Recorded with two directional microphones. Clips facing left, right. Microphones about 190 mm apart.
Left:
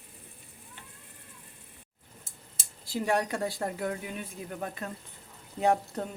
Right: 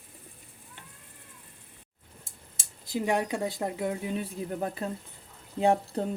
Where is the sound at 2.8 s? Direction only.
15° right (ahead or behind).